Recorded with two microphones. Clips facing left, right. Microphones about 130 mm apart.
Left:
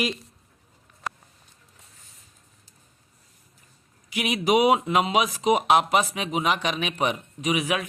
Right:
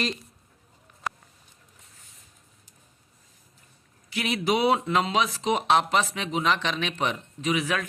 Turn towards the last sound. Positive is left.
turn(degrees=15)  # may be behind; listen again after turning